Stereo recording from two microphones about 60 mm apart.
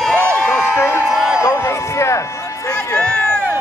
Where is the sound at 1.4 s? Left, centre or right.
Left.